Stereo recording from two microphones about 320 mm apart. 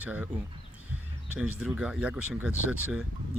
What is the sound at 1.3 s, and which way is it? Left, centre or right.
Speech, centre.